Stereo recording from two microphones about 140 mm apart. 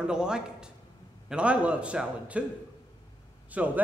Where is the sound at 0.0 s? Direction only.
5° right (ahead or behind).